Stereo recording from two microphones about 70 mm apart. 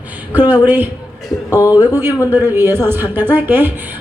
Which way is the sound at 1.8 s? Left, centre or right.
Right.